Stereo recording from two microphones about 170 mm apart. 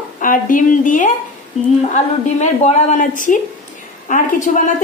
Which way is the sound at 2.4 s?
45° left (ahead or behind).